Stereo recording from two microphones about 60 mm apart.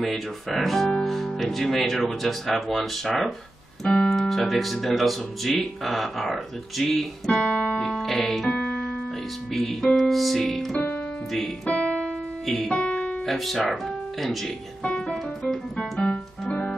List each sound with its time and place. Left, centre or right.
0.0 s speech: centre
3.8 s speech: centre
4.1 s speech: centre
7.2 s music: centre
7.8 s speech: centre
8.5 s piano: centre
9.5 s speech: centre
11.7 s keyboard: centre
12.4 s speech: centre
12.7 s music: centre
13.2 s speech: centre
14.8 s piano: centre
15.0 s keyboard: centre
16.1 s music: centre